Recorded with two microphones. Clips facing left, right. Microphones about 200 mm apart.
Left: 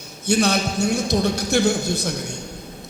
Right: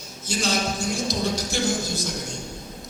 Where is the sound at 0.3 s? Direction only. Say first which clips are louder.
Left 6 dB; 60° left (ahead or behind).